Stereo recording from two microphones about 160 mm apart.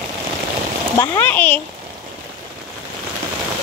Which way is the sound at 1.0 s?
10° left (ahead or behind).